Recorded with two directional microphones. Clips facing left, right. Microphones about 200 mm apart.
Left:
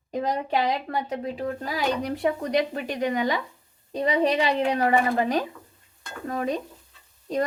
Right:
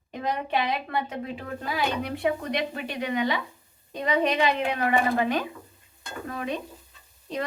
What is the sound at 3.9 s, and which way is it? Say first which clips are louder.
A woman's voice: left 2 dB; 30° left (ahead or behind).